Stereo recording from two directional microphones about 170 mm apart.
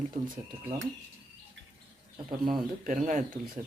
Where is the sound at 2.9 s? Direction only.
50° right (ahead or behind).